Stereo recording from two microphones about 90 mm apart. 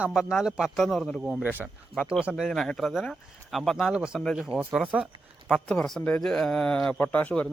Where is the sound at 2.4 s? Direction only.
5° left (ahead or behind).